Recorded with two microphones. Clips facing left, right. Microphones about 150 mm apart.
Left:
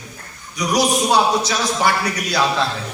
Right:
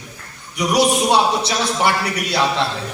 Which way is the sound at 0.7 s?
25° right (ahead or behind).